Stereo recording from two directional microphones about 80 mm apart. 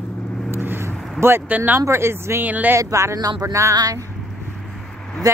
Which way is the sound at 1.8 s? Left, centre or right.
Right.